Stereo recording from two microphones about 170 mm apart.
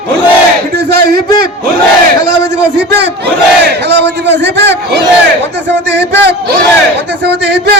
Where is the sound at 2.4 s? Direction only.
90° right.